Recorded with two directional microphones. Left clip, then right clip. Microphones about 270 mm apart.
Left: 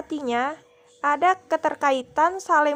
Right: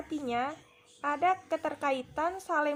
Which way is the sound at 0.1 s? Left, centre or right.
Left.